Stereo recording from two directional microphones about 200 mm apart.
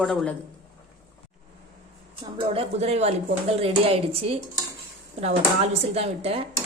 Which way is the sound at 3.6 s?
30° right (ahead or behind).